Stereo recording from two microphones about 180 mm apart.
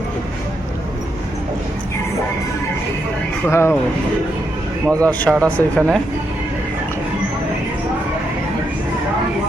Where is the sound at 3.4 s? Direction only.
15° left (ahead or behind).